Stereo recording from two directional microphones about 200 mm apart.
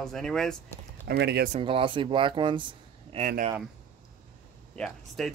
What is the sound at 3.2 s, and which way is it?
Speech, 40° right (ahead or behind).